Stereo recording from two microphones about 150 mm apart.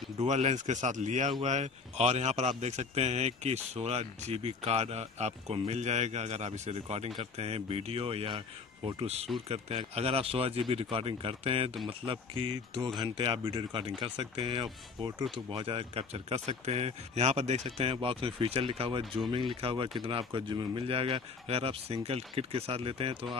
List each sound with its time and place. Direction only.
0.2 s a man's voice: 50° right (ahead or behind)